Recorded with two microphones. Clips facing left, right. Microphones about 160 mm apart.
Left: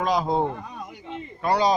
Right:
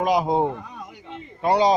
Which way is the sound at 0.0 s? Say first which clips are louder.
Right 3 dB; 20° right (ahead or behind).